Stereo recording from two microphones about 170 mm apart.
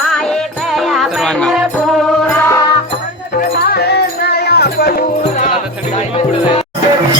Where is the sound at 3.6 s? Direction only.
70° left (ahead or behind).